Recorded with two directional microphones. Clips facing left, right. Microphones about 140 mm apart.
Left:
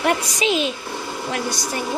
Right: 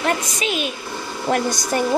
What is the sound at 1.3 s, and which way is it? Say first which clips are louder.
Speech: right 7 dB; 45° right (ahead or behind).